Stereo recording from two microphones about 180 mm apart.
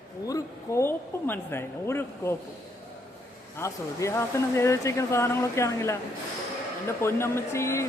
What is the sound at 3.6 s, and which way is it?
Speech, 15° left (ahead or behind).